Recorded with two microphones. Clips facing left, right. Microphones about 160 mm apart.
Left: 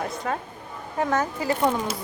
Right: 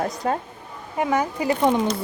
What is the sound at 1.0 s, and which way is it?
Speech, 10° right (ahead or behind).